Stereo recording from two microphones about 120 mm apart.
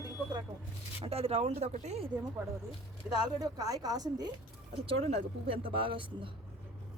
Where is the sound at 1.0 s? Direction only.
55° right (ahead or behind); by 2.0 s 70° right (ahead or behind).